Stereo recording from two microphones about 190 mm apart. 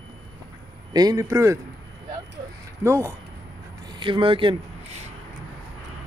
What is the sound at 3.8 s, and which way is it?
Speech, 25° right (ahead or behind).